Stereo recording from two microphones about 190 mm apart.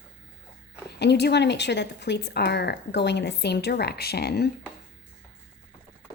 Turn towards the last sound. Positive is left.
turn(degrees=55)  # may be behind; listen again after turning